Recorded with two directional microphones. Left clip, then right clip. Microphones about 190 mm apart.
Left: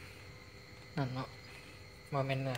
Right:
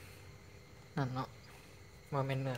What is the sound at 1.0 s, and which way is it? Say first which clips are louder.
Speech: right 1 dB; 25° right (ahead or behind).